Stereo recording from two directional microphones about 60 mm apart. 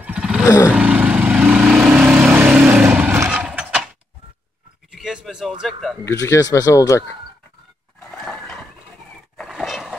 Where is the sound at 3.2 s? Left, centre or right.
Right.